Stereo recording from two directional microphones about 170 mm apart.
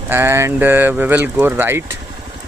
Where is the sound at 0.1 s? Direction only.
15° right (ahead or behind).